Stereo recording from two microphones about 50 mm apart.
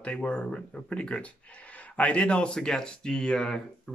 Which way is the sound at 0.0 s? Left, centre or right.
Left.